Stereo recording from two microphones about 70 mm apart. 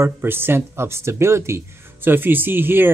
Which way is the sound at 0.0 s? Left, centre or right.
Right.